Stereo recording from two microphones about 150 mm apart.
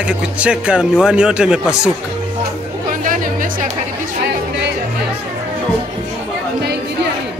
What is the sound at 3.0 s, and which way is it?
Music, 60° right (ahead or behind).